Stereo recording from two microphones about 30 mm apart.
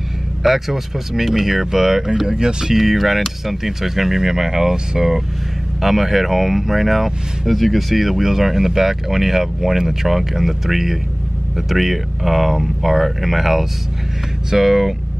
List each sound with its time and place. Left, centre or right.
0.4 s speech: centre
2.2 s speech: right
2.7 s speech: centre